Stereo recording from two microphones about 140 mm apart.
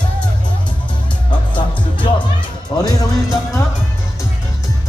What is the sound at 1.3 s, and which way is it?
Music, 35° left (ahead or behind).